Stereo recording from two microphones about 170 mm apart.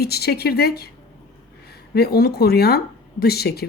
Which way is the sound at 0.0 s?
70° left (ahead or behind).